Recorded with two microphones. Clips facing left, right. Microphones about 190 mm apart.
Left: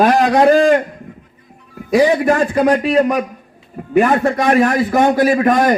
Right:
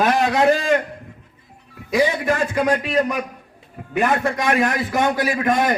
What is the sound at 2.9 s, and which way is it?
Speech, 50° left (ahead or behind).